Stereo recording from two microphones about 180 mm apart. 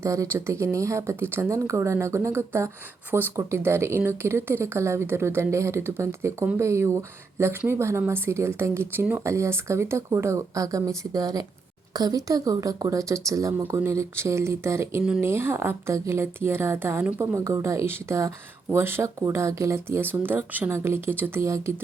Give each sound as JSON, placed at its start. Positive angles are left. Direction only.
{"t": 0.0, "sound": "a woman's voice", "side_deg": -15}